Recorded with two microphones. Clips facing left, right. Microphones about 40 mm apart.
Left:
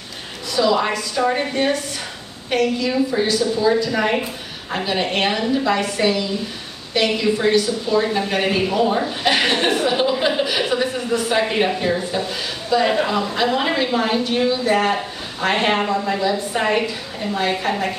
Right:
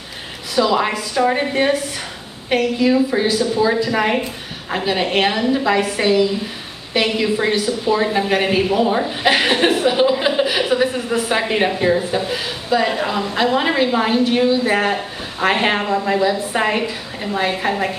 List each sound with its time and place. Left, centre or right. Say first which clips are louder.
0.6 s speech: right 1 dB; centre
1.5 s a woman's voice: right 3 dB; centre
12.8 s a woman's voice: left 1 dB; centre